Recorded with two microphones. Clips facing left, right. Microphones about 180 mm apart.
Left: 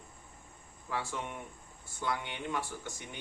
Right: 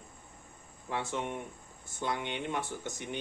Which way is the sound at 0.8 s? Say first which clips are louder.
Right 3 dB; 20° right (ahead or behind).